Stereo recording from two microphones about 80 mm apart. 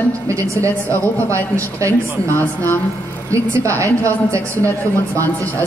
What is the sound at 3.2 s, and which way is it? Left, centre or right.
A woman's voice, right.